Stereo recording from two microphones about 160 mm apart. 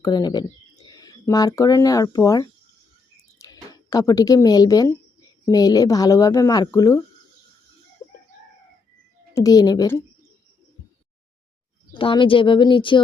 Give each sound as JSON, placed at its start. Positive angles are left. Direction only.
{"t": 0.0, "sound": "a woman's voice", "side_deg": 25}
{"t": 9.3, "sound": "a woman's voice", "side_deg": 20}
{"t": 11.9, "sound": "speech", "side_deg": 35}